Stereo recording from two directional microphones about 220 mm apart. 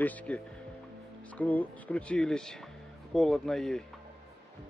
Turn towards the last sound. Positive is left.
turn(degrees=0)  # may be behind; listen again after turning